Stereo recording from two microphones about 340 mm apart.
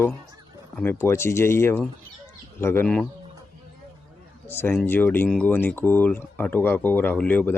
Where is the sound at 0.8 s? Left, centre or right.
Centre.